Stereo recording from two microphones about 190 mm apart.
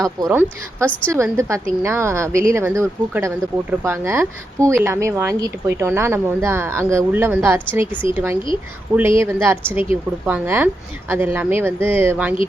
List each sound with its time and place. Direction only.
0.0 s speech: 15° right (ahead or behind)